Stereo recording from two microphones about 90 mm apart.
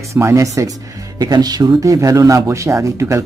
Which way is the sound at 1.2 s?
45° right (ahead or behind).